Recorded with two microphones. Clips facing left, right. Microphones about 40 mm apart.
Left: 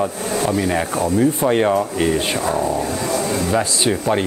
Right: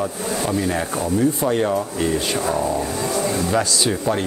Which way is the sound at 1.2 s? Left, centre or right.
Left.